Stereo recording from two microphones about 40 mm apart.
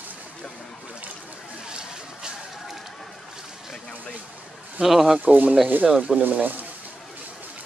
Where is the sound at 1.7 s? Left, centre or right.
Right.